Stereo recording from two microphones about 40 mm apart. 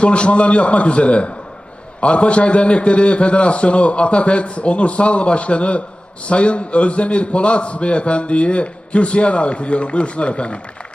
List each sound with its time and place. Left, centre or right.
0.0 s a man's voice: left